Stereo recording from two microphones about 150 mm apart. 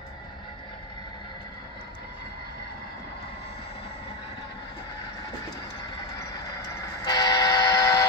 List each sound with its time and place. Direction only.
7.1 s buzzer: 25° left (ahead or behind)